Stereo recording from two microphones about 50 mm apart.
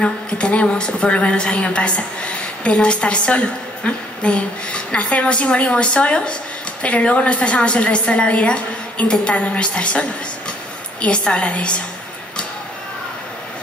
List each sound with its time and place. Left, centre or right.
0.0 s a woman's voice: left